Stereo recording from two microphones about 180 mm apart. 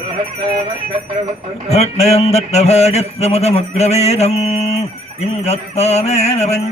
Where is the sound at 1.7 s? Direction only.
35° left (ahead or behind).